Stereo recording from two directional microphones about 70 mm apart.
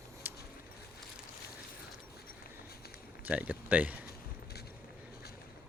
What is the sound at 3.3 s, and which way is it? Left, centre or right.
Speech, right.